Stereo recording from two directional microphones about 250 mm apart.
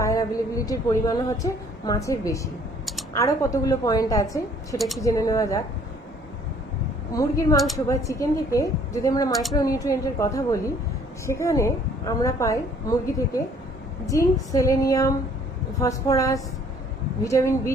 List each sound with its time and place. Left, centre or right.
0.0 s a woman's voice: centre
7.2 s a woman's voice: centre